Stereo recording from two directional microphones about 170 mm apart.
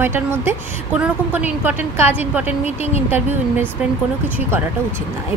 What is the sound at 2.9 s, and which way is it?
Speech, 40° left (ahead or behind).